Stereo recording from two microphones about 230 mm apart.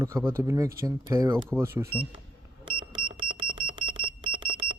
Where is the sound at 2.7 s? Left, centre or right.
Right.